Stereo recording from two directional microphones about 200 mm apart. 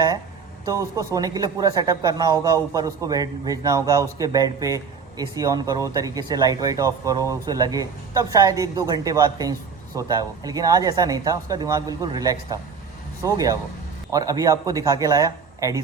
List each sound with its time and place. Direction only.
0.6 s speech: 15° right (ahead or behind)